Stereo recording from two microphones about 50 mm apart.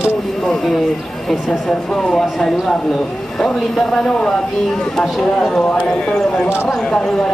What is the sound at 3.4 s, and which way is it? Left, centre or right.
Speech, centre.